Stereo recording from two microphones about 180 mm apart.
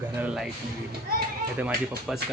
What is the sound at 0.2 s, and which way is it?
Speech, 5° right (ahead or behind).